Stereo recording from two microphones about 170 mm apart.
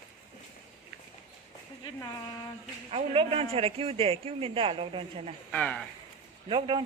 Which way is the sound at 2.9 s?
35° right (ahead or behind).